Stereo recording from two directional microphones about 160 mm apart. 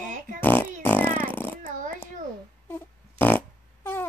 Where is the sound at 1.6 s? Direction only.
55° right (ahead or behind).